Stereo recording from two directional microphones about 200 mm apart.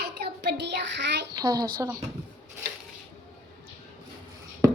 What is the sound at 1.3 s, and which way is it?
Speech, 20° right (ahead or behind).